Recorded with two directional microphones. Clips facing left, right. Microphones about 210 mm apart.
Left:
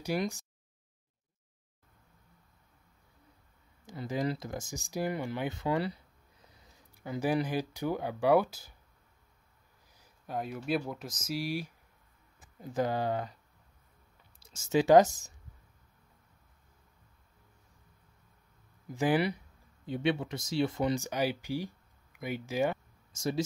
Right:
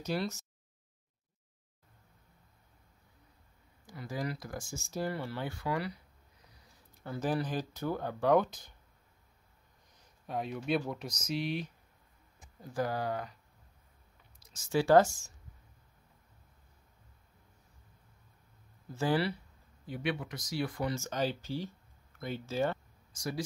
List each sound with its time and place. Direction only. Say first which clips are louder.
0.0 s speech: left 2 dB; 15° left (ahead or behind)
3.8 s speech: left 5 dB; 25° left (ahead or behind)
6.9 s speech: left 3 dB; 10° left (ahead or behind)
9.9 s speech: even; centre (ahead or behind)
12.5 s speech: left 3 dB; 20° left (ahead or behind)
14.4 s speech: left 3 dB; 25° left (ahead or behind)
18.9 s speech: left 3 dB; 15° left (ahead or behind)
23.1 s speech: left 5 dB; 25° left (ahead or behind)